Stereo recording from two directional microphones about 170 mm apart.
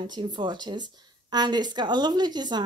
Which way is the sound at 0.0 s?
25° right (ahead or behind).